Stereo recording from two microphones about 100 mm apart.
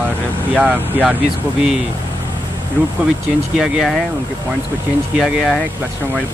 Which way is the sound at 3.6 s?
5° right (ahead or behind).